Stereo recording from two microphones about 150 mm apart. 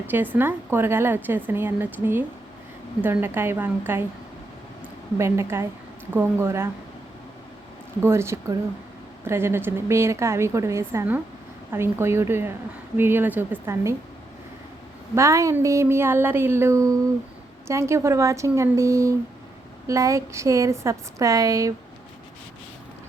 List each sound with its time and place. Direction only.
0.1 s a woman's voice: 15° right (ahead or behind)
5.1 s a woman's voice: 20° right (ahead or behind)
8.0 s a woman's voice: 15° right (ahead or behind)
15.1 s a woman's voice: 20° right (ahead or behind)